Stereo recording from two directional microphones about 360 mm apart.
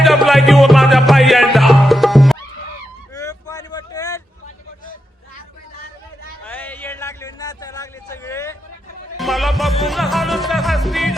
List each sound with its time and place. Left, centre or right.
0.0 s music: centre
3.2 s vehicle: centre
6.4 s a sound: centre
9.1 s music: centre